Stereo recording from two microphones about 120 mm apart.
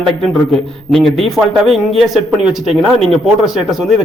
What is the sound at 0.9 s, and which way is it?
Speech, 5° left (ahead or behind).